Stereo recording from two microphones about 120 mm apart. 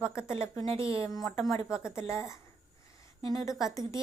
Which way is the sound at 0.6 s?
50° right (ahead or behind).